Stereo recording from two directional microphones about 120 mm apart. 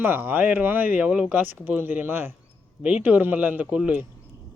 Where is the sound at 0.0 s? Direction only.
15° right (ahead or behind).